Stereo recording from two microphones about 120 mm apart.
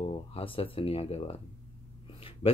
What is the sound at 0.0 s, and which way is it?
Speech, 50° left (ahead or behind).